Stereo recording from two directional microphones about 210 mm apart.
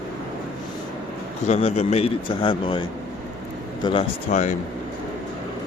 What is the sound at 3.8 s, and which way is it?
Speech, 25° left (ahead or behind).